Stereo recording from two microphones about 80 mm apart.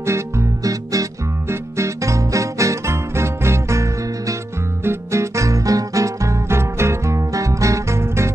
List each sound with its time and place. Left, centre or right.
1.5 s music: right